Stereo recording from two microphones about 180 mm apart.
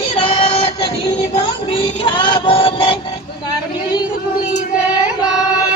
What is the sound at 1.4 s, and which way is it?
Synthetic singing, 30° left (ahead or behind).